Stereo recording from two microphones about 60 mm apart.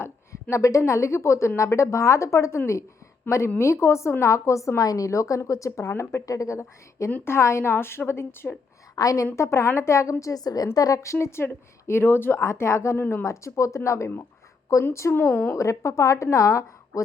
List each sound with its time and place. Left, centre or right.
0.5 s a woman's voice: left
3.6 s a woman's voice: left
4.8 s a woman's voice: left
6.2 s a woman's voice: left
9.0 s a woman's voice: left
9.3 s a woman's voice: left
10.8 s speech: left
12.4 s speech: left
13.0 s speech: left
13.2 s a woman's voice: left
15.1 s speech: left
15.5 s a woman's voice: left